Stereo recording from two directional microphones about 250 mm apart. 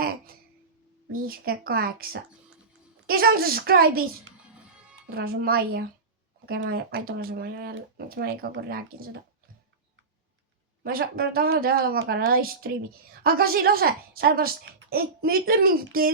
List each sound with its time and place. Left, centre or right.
1.1 s a woman's voice: right
3.1 s a woman's voice: right
5.1 s a woman's voice: right
10.8 s a woman's voice: right